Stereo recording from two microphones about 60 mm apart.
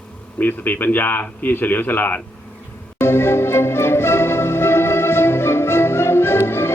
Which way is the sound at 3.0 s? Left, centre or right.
Left.